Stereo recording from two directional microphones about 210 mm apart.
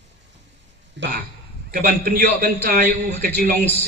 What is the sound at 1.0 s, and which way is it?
Speech, 60° right (ahead or behind).